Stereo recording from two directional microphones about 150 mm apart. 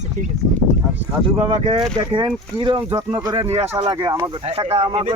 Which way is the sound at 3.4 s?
45° right (ahead or behind).